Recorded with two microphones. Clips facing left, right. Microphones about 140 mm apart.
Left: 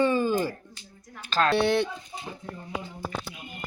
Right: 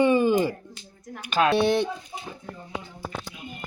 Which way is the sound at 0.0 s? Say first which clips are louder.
Right 4 dB; 15° right (ahead or behind).